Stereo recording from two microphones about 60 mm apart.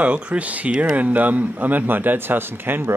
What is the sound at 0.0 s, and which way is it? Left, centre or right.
Speech, right.